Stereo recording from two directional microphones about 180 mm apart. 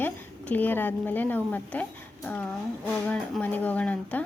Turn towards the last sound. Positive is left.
turn(degrees=10)  # may be behind; listen again after turning